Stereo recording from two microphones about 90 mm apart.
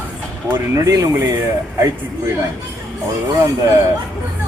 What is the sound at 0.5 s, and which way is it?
Speech, 30° right (ahead or behind).